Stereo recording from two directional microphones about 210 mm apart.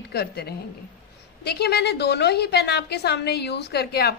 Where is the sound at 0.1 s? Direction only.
50° left (ahead or behind).